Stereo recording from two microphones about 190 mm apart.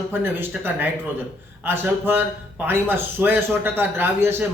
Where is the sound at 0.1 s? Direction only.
10° right (ahead or behind).